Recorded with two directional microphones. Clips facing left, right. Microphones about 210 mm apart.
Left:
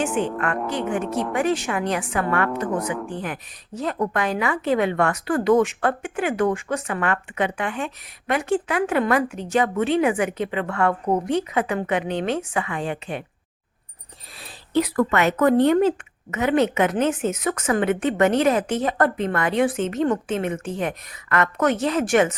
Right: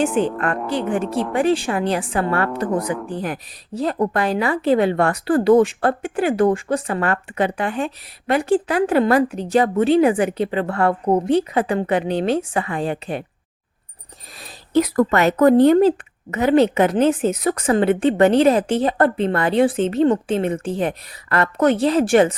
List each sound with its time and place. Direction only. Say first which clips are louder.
0.1 s a woman's voice: right 4 dB; centre (ahead or behind)
0.7 s a woman's voice: right 3 dB; 30° right (ahead or behind)
2.8 s speech: right 2 dB; 5° left (ahead or behind)
3.1 s a woman's voice: right 4 dB; 35° right (ahead or behind)
14.7 s a woman's voice: right 4 dB; 40° right (ahead or behind)